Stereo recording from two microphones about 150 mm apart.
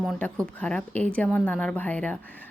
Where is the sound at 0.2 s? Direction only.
10° left (ahead or behind).